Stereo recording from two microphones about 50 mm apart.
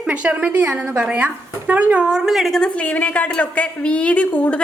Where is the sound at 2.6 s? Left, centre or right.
Left.